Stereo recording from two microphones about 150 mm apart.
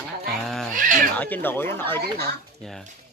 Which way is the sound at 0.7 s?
60° right (ahead or behind).